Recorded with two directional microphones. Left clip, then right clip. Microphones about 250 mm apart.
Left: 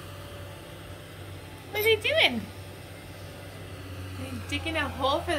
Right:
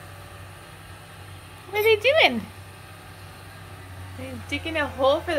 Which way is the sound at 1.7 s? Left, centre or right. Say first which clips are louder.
Right 5 dB; centre.